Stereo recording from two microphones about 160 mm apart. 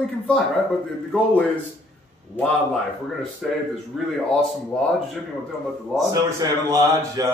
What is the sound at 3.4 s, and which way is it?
Speech, centre (ahead or behind).